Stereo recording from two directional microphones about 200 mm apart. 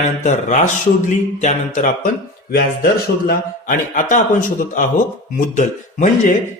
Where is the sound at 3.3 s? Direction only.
40° left (ahead or behind).